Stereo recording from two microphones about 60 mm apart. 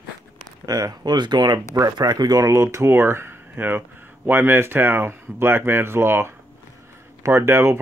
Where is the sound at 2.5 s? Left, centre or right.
Right.